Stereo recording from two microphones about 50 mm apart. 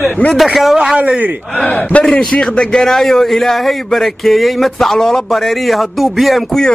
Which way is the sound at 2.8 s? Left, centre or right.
Centre.